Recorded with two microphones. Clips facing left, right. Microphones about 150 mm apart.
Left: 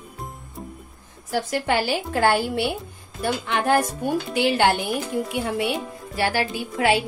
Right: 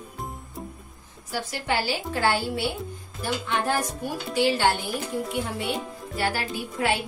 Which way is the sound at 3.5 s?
70° left (ahead or behind).